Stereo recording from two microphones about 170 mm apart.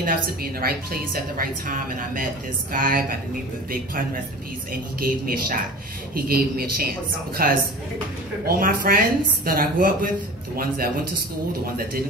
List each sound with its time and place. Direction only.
0.0 s a woman's voice: 60° right (ahead or behind)